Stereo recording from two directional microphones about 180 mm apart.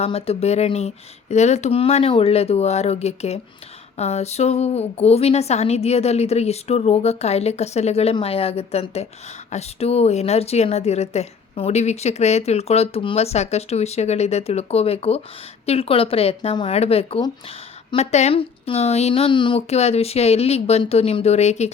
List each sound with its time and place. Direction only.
0.0 s a woman's voice: 35° left (ahead or behind)